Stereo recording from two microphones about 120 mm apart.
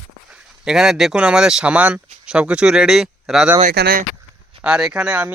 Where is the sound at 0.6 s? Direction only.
5° right (ahead or behind).